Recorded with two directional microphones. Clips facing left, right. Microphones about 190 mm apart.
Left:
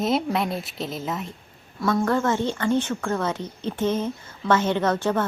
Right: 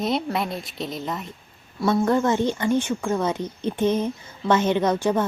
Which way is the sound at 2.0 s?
15° right (ahead or behind).